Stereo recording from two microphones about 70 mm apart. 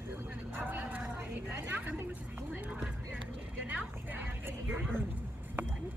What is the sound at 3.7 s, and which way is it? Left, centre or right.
Speech, right.